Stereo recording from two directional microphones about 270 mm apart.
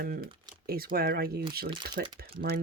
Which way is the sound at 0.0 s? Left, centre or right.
Right.